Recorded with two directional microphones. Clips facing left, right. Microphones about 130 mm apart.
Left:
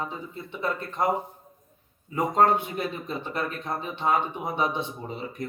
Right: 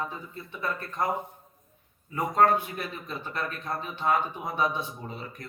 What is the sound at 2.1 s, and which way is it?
Speech, 20° left (ahead or behind).